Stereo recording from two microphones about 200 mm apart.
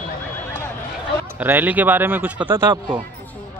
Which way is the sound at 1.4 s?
10° right (ahead or behind).